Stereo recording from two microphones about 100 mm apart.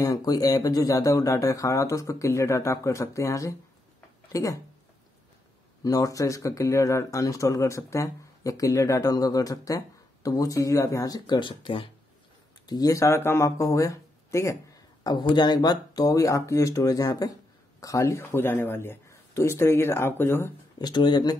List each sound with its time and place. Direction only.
0.0 s speech: 40° left (ahead or behind)
5.9 s speech: 35° left (ahead or behind); by 11.9 s 55° left (ahead or behind)
12.6 s speech: 40° left (ahead or behind); by 20.5 s 25° left (ahead or behind)
20.8 s speech: 50° left (ahead or behind)